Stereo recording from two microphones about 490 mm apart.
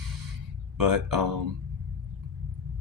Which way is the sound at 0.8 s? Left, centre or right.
Right.